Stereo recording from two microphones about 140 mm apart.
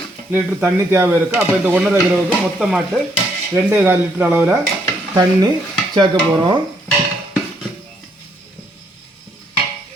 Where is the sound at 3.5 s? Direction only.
15° right (ahead or behind).